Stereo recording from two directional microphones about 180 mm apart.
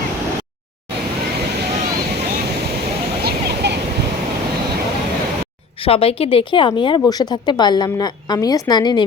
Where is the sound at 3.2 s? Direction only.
65° right (ahead or behind).